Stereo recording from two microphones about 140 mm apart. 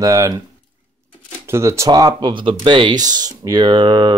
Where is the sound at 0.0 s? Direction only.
25° right (ahead or behind).